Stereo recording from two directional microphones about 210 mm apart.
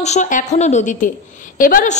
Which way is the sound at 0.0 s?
35° left (ahead or behind).